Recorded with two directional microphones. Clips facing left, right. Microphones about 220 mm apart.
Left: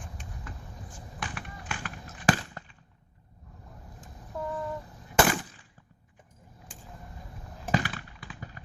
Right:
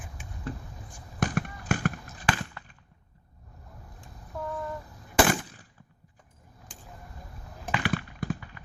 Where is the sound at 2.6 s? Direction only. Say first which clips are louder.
Left 2 dB; 40° left (ahead or behind).